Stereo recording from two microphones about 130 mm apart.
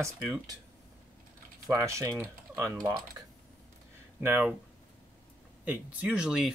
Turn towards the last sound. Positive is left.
turn(degrees=-5)  # may be behind; listen again after turning